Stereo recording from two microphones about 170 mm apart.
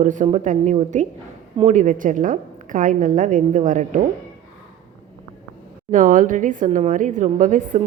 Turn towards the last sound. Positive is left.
turn(degrees=-50)  # may be behind; listen again after turning